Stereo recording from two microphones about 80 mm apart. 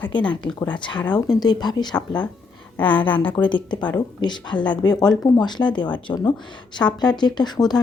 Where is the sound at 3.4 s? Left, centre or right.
Left.